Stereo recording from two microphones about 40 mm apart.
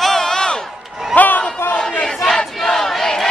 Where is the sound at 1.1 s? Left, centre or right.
Left.